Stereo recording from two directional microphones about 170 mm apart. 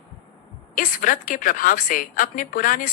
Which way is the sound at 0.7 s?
55° left (ahead or behind).